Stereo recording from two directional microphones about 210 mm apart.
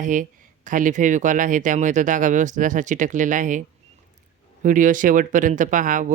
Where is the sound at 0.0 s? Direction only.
40° right (ahead or behind).